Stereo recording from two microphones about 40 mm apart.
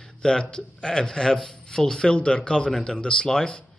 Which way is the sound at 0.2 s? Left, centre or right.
Centre.